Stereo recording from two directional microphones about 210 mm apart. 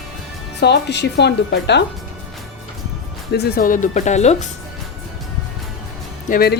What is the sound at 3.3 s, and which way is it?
Speech, 50° left (ahead or behind).